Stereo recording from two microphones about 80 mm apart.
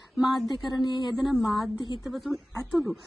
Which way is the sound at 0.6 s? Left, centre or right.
Left.